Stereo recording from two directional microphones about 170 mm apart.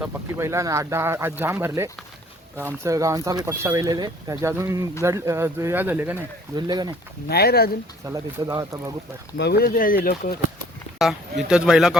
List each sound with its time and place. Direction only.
0.0 s speech: 15° right (ahead or behind)
6.6 s speech: 25° right (ahead or behind)
7.3 s speech: 65° left (ahead or behind)
8.0 s speech: 20° right (ahead or behind)
9.4 s speech: 70° left (ahead or behind)
10.9 s speech: 5° right (ahead or behind)